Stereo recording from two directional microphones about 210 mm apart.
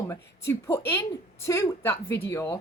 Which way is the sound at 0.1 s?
15° left (ahead or behind).